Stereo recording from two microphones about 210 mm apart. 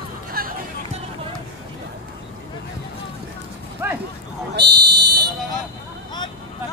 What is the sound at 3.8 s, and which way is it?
Speech, 10° right (ahead or behind).